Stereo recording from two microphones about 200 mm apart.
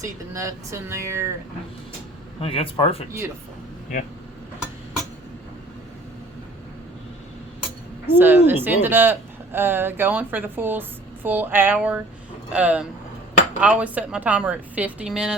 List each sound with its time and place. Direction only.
0.0 s speech: 15° right (ahead or behind)
2.4 s speech: 25° left (ahead or behind)
8.0 s a woman's voice: 10° right (ahead or behind)